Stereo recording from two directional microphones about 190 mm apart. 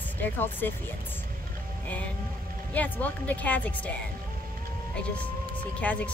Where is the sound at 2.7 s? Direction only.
10° left (ahead or behind).